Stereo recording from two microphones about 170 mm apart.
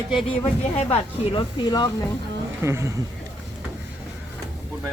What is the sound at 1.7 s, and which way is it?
Speech, 25° left (ahead or behind).